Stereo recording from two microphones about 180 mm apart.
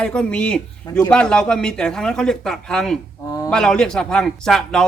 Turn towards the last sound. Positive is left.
turn(degrees=5)  # may be behind; listen again after turning